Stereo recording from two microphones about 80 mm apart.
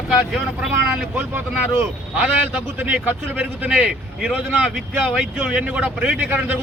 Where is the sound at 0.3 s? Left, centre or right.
Centre.